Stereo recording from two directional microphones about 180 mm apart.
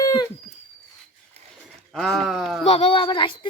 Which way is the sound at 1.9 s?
Centre (ahead or behind).